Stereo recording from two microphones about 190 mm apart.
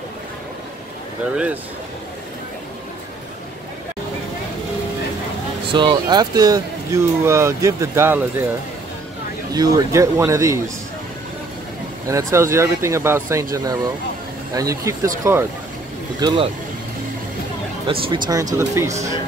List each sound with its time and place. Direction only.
1.3 s speech: 5° right (ahead or behind)
5.7 s speech: 25° right (ahead or behind)
9.5 s speech: 20° right (ahead or behind)
12.1 s speech: 15° right (ahead or behind)
17.8 s speech: 30° right (ahead or behind)